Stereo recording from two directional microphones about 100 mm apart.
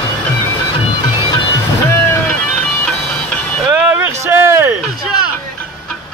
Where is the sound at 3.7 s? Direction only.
15° right (ahead or behind).